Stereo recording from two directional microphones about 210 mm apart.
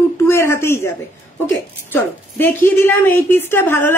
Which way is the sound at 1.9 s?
10° left (ahead or behind).